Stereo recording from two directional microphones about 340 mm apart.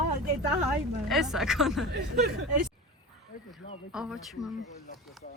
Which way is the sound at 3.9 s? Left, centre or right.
Centre.